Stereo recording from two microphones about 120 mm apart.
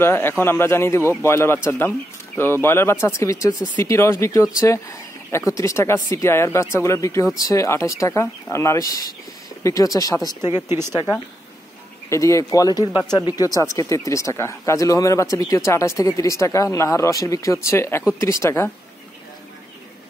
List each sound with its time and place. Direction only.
0.0 s speech: 20° left (ahead or behind)
10.5 s speech: 20° right (ahead or behind)
12.1 s speech: 25° left (ahead or behind)